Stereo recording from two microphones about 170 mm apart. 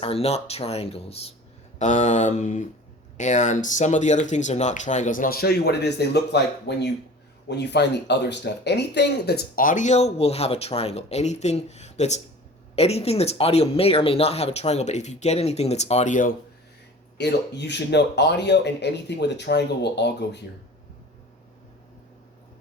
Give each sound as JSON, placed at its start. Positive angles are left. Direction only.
{"t": 0.0, "sound": "speech", "side_deg": 35}
{"t": 17.2, "sound": "speech", "side_deg": 85}